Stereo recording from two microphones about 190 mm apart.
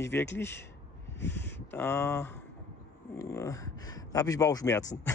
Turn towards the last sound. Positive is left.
turn(degrees=15)  # may be behind; listen again after turning